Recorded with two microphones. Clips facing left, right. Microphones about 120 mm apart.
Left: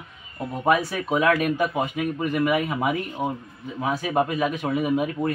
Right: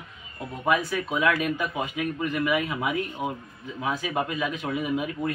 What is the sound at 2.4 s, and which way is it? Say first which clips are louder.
A man's voice: left 4 dB; 35° left (ahead or behind).